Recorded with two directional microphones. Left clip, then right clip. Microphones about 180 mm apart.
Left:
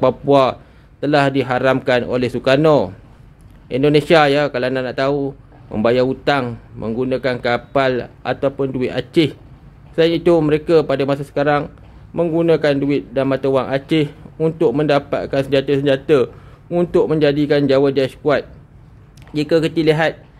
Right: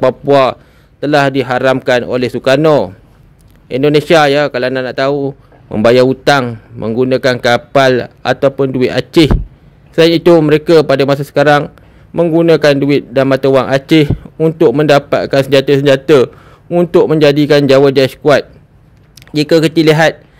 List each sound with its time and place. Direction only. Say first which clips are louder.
0.0 s a man's voice: right 5 dB; 40° right (ahead or behind)
11.6 s a man's voice: right 6 dB; 35° right (ahead or behind)